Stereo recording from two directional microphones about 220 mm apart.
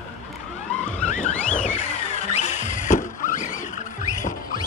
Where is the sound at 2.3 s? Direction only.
35° left (ahead or behind).